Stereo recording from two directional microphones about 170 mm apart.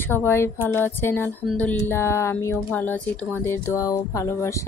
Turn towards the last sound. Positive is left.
turn(degrees=20)  # may be behind; listen again after turning